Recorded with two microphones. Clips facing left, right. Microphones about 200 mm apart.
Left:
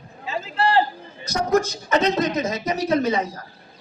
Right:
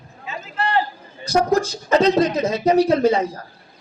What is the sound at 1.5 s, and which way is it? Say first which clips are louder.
Speech: left 2 dB; 30° right (ahead or behind).